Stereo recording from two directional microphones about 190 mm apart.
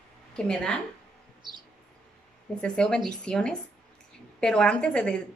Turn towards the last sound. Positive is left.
turn(degrees=5)  # may be behind; listen again after turning